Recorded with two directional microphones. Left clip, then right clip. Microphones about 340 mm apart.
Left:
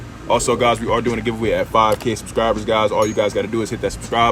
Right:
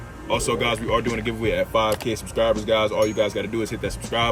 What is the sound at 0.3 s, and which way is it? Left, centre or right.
Speech, centre.